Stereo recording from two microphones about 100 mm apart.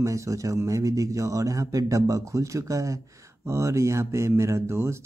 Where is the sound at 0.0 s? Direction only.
30° right (ahead or behind).